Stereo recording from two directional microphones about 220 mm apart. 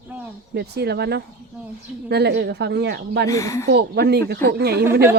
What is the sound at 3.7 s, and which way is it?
Speech, 45° right (ahead or behind).